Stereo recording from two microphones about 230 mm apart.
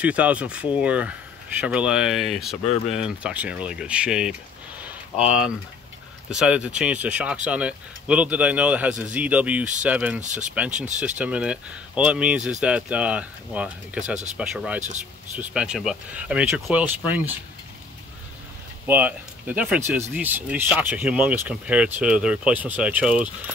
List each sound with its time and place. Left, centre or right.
0.0 s speech: centre
10.2 s speech: right
10.5 s speech: centre
18.9 s speech: centre